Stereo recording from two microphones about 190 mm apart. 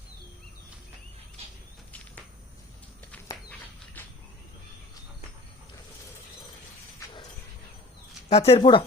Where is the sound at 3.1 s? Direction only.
10° left (ahead or behind).